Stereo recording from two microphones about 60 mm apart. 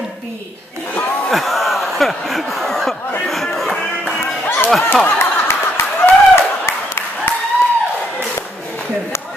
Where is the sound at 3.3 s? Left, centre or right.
Centre.